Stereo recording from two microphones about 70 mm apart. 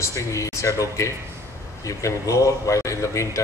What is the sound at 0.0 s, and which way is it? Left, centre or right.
A man's voice, left.